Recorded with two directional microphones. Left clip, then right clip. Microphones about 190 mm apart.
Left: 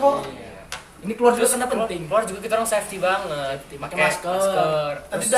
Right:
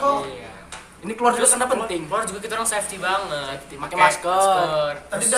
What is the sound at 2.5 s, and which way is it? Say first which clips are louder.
Speech: left 5 dB; 15° left (ahead or behind).